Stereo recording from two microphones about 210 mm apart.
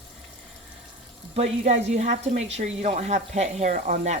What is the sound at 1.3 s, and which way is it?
Frying, 30° right (ahead or behind).